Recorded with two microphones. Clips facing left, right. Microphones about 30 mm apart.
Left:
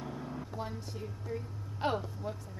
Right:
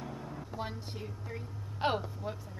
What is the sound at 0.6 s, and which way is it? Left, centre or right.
A woman's voice, right.